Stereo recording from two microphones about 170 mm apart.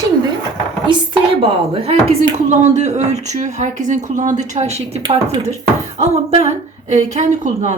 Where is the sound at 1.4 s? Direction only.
35° right (ahead or behind).